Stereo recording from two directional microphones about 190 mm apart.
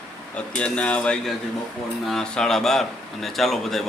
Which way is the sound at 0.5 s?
5° left (ahead or behind).